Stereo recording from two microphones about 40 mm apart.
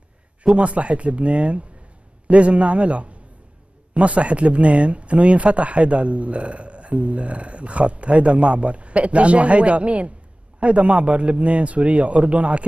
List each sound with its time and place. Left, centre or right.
0.6 s speech: right